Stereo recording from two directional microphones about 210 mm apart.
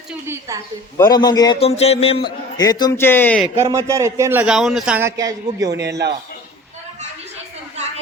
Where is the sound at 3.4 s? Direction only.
15° right (ahead or behind).